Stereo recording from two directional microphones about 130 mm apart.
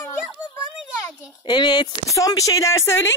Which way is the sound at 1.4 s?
35° left (ahead or behind).